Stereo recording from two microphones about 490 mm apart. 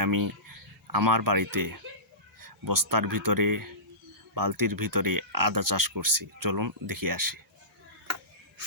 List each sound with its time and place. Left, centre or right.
0.0 s speech: right